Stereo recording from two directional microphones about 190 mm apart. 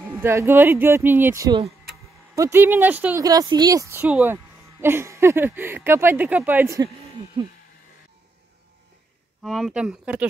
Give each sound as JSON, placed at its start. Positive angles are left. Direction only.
{"t": 0.0, "sound": "speech", "side_deg": -10}
{"t": 3.3, "sound": "speech", "side_deg": -20}
{"t": 9.4, "sound": "speech", "side_deg": 0}